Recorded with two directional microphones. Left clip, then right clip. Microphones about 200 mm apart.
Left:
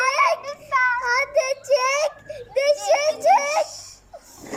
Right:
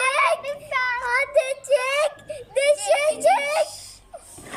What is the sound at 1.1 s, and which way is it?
Speech, 5° left (ahead or behind).